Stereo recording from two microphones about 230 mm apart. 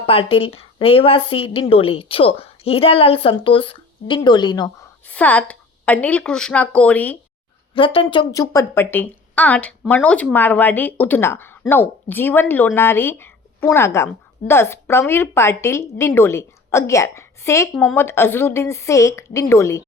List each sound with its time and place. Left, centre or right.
0.0 s a woman's voice: left
5.0 s a woman's voice: centre
7.7 s speech: left